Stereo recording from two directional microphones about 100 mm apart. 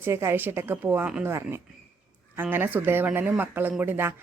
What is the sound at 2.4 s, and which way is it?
A woman's voice, 20° right (ahead or behind).